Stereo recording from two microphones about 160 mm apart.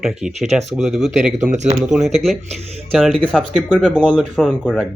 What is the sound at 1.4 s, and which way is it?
Speech, 50° right (ahead or behind).